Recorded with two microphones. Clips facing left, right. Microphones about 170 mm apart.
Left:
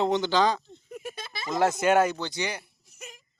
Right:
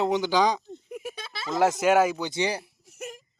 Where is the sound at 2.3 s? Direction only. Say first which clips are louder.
Right 5 dB; 30° right (ahead or behind).